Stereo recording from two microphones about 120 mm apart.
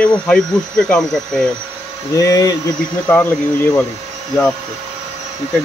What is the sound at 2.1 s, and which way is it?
Speech, 30° left (ahead or behind).